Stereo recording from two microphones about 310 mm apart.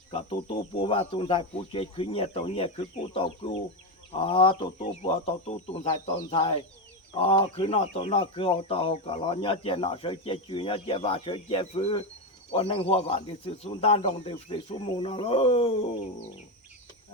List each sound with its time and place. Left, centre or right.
0.1 s speech: centre